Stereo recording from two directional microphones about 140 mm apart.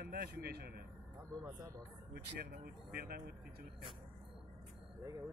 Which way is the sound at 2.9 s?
90° right.